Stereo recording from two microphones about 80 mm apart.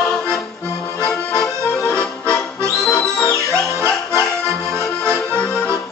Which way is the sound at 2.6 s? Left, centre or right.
Right.